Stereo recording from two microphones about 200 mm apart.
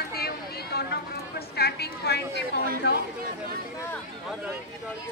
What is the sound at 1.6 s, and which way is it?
Speech, 55° left (ahead or behind).